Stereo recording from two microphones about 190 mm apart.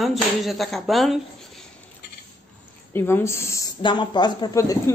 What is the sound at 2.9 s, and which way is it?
A woman's voice, 10° left (ahead or behind).